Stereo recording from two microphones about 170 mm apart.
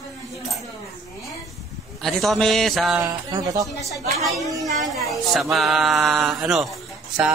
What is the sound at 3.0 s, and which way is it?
Speech, 20° right (ahead or behind).